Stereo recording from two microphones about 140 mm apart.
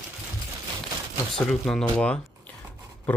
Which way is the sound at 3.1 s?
10° left (ahead or behind).